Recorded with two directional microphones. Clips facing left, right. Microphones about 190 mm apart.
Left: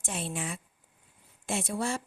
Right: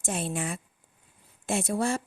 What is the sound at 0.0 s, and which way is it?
A woman's voice, 45° right (ahead or behind).